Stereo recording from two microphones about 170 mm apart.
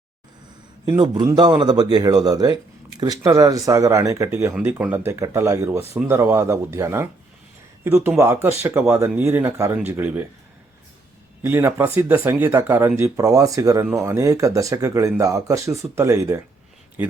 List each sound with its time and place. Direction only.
0.9 s speech: 25° right (ahead or behind)
11.4 s speech: 15° right (ahead or behind)